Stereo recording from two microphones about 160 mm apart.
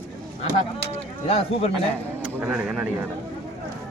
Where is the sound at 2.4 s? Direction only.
5° right (ahead or behind).